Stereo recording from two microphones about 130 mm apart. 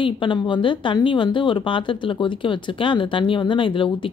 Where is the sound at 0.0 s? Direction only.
40° left (ahead or behind).